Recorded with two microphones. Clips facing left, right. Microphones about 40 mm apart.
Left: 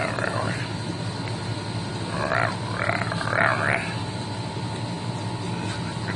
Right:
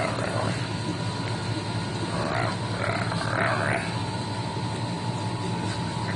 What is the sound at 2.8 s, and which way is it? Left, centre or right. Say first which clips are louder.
Grunt: left 2 dB; left.